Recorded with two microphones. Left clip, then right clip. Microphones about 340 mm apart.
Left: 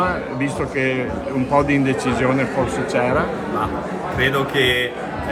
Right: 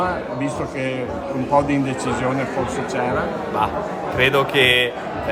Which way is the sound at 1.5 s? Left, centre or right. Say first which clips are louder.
Left 1 dB; centre.